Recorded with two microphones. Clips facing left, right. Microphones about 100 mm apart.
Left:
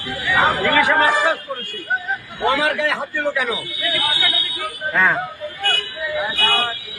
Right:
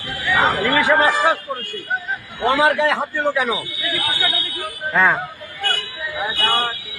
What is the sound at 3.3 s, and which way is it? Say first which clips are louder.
Speech: right 2 dB; 25° right (ahead or behind).